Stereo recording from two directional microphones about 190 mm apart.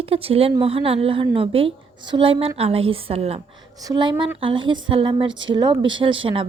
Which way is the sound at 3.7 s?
20° right (ahead or behind).